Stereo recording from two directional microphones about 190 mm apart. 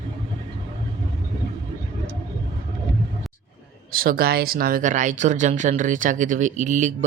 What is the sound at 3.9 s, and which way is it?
Speech, 50° right (ahead or behind).